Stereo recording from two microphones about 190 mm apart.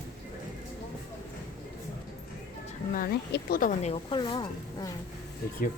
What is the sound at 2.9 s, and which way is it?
Speech, 55° left (ahead or behind).